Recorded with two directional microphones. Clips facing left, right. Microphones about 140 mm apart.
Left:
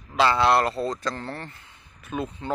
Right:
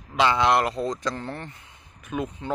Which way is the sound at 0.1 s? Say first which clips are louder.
Left 1 dB; 15° right (ahead or behind).